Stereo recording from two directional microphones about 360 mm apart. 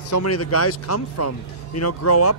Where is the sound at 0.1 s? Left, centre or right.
Left.